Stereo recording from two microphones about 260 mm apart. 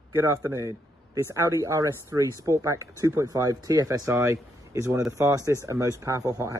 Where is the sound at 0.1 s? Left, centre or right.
Centre.